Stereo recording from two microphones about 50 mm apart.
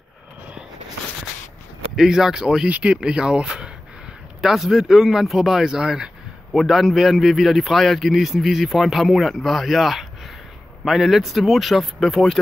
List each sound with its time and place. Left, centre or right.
2.0 s speech: centre
2.7 s speech: right
6.5 s a man's voice: centre